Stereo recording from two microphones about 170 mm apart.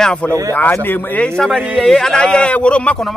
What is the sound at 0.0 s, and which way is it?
A man's voice, 5° left (ahead or behind).